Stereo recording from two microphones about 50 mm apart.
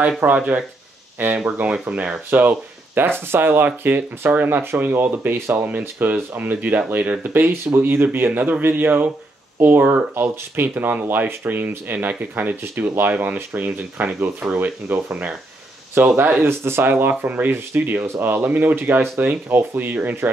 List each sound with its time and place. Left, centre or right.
0.2 s speech: right
16.0 s speech: right